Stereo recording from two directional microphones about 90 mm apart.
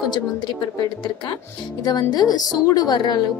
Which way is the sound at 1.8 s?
50° left (ahead or behind).